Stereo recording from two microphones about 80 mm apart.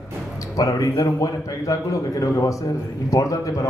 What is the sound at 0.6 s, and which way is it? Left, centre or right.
A man's voice, left.